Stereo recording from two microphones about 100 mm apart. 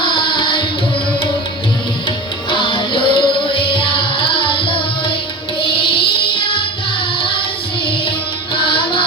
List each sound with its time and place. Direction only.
0.0 s tabla: 55° left (ahead or behind)
2.5 s music: 60° left (ahead or behind)